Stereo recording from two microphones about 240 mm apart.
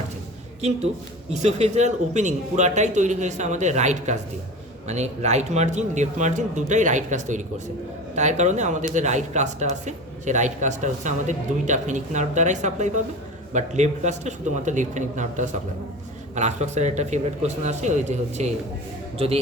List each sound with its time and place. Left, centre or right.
1.4 s a man's voice: right